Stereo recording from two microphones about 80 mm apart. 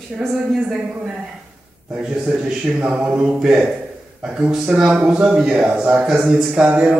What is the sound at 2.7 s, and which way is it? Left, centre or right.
A man's voice, centre.